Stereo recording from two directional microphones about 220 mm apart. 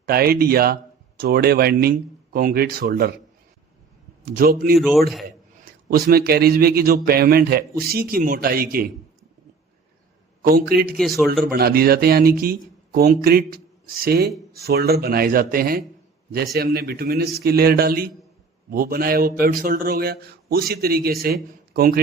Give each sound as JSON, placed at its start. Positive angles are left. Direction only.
{"t": 0.0, "sound": "speech", "side_deg": -45}
{"t": 4.3, "sound": "a man's voice", "side_deg": -40}
{"t": 4.8, "sound": "speech", "side_deg": 0}
{"t": 5.9, "sound": "speech", "side_deg": -45}
{"t": 10.4, "sound": "speech", "side_deg": -45}
{"t": 10.9, "sound": "speech", "side_deg": 0}
{"t": 11.5, "sound": "speech", "side_deg": -45}